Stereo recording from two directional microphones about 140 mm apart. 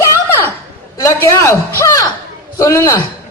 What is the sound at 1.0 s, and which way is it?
A woman's voice, 20° left (ahead or behind).